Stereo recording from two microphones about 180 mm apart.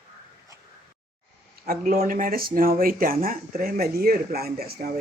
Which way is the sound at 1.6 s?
55° right (ahead or behind).